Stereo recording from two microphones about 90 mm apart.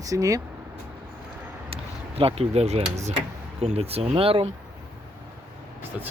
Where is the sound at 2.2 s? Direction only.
90° right.